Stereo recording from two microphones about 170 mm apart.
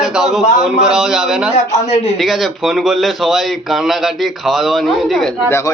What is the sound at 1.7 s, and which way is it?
Speech, 40° left (ahead or behind).